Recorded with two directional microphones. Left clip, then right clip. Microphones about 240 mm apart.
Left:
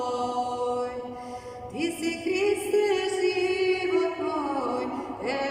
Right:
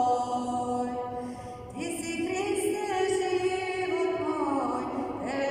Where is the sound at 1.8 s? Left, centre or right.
Left.